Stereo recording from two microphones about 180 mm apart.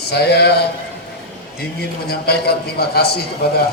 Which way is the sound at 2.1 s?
60° left (ahead or behind).